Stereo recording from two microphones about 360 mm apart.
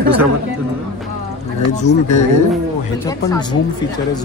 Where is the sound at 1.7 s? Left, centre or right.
Centre.